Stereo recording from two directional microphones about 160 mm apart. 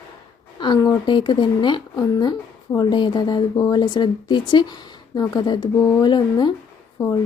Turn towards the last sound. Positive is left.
turn(degrees=15)  # may be behind; listen again after turning